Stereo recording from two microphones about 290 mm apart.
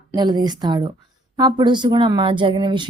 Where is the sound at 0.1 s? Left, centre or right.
Centre.